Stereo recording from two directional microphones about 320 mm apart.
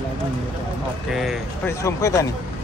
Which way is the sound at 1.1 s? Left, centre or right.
Centre.